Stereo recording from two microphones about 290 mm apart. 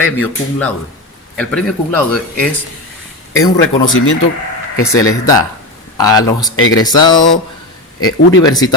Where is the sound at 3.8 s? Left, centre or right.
Left.